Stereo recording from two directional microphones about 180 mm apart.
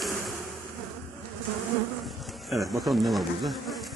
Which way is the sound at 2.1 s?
Centre (ahead or behind).